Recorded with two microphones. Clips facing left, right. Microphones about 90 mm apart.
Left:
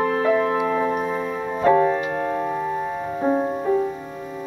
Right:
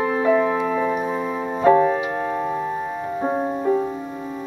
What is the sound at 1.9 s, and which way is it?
Keyboard, 15° right (ahead or behind).